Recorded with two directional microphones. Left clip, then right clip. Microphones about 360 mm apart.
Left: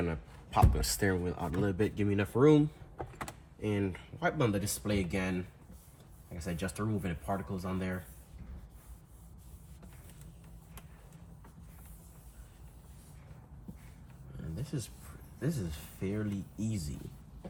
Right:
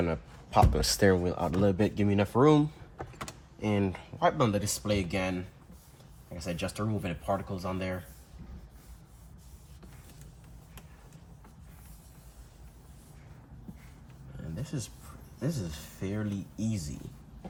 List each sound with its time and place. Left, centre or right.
0.0 s speech: right
3.0 s power windows: centre
4.4 s speech: centre
6.3 s speech: centre
13.7 s a sound: centre
15.4 s speech: centre